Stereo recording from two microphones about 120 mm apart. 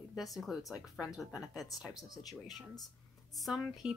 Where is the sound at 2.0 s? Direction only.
30° left (ahead or behind).